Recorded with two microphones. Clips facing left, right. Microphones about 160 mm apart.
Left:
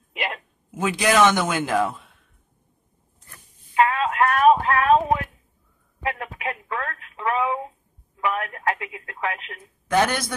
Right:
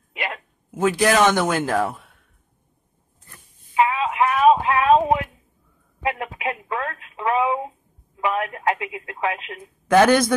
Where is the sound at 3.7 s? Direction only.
5° right (ahead or behind).